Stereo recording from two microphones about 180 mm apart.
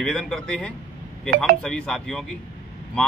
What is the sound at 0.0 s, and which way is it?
Speech, 5° left (ahead or behind).